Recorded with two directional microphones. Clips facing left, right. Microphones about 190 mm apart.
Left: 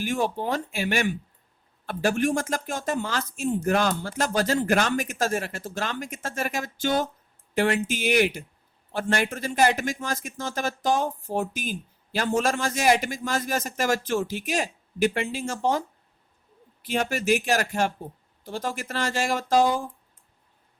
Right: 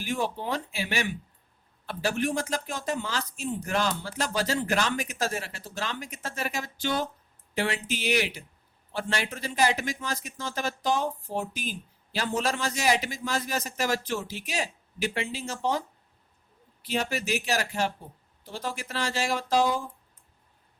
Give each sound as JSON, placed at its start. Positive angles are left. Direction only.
{"t": 0.0, "sound": "a man's voice", "side_deg": 50}
{"t": 16.8, "sound": "a man's voice", "side_deg": 50}